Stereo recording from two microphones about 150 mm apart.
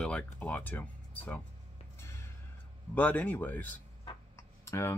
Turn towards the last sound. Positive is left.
turn(degrees=20)  # may be behind; listen again after turning